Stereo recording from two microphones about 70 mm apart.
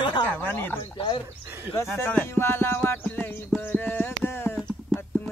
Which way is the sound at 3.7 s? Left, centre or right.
Left.